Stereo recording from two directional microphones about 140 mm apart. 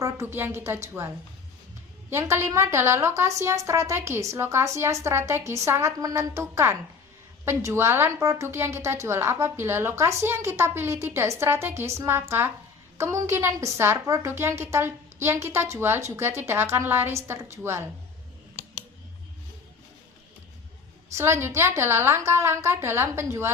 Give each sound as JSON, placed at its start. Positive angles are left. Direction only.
{"t": 0.0, "sound": "a woman's voice", "side_deg": -15}
{"t": 21.1, "sound": "a woman's voice", "side_deg": -20}